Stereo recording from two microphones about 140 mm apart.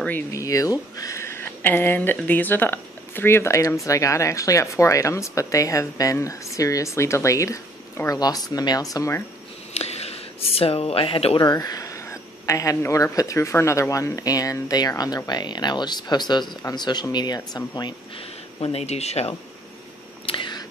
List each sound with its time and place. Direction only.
0.3 s speech: 25° left (ahead or behind)
9.8 s speech: 50° left (ahead or behind)
11.4 s speech: 25° left (ahead or behind); by 19.3 s 50° left (ahead or behind)
20.2 s a sound: 35° left (ahead or behind)